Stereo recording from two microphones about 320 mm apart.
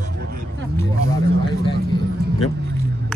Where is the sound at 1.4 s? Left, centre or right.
Centre.